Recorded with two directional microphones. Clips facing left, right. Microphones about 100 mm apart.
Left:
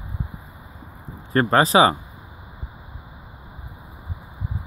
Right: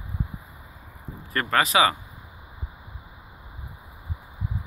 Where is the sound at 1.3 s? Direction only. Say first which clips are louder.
Left 6 dB; 30° left (ahead or behind).